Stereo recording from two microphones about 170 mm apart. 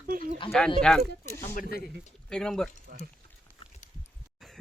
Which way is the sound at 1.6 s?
65° left (ahead or behind).